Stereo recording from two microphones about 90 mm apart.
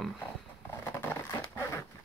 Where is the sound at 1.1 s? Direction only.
25° left (ahead or behind).